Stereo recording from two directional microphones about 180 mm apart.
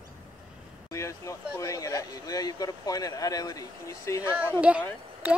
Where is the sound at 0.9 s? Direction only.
15° left (ahead or behind).